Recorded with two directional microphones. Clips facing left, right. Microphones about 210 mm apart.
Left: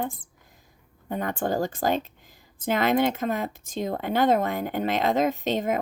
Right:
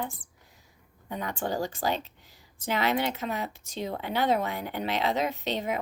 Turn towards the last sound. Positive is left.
turn(degrees=50)  # may be behind; listen again after turning